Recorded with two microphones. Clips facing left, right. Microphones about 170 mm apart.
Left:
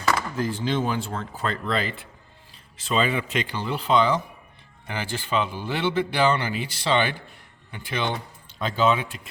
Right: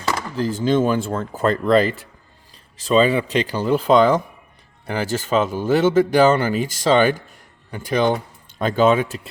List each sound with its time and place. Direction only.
0.0 s a man's voice: 30° right (ahead or behind)